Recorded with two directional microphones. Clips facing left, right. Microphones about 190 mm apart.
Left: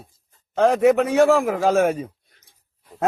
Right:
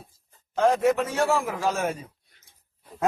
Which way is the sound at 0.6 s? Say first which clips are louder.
Left 5 dB; 65° left (ahead or behind).